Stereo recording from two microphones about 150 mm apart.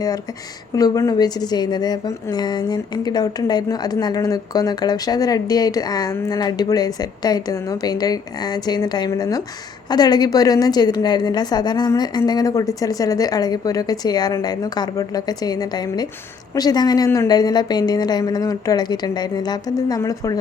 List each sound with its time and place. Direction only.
0.8 s a woman's voice: 25° left (ahead or behind)